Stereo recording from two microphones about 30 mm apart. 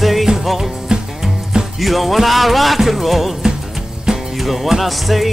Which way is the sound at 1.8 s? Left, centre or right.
Centre.